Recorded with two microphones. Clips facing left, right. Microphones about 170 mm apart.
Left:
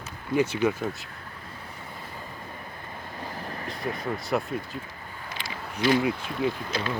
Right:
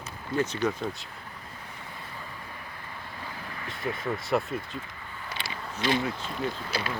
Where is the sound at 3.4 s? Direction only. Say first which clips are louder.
Left 4 dB; 40° left (ahead or behind).